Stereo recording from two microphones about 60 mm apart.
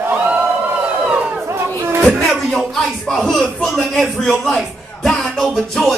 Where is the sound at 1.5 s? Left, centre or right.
Right.